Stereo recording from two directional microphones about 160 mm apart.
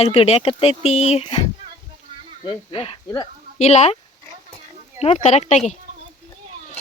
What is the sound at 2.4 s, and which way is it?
Speech, 35° left (ahead or behind).